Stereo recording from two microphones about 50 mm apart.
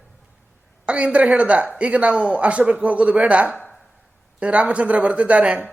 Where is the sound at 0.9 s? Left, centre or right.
Right.